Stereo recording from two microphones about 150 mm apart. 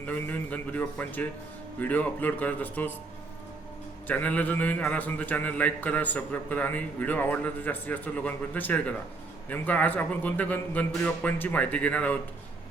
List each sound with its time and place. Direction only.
0.0 s a man's voice: 10° left (ahead or behind)
4.0 s a man's voice: 10° left (ahead or behind)